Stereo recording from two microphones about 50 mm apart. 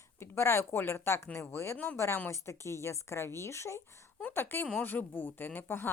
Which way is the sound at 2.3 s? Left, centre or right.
Left.